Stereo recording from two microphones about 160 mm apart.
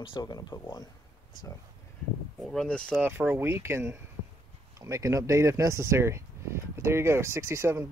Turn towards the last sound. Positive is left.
turn(degrees=-15)  # may be behind; listen again after turning